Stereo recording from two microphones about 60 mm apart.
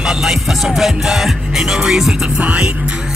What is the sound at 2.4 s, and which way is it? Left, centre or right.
Music, right.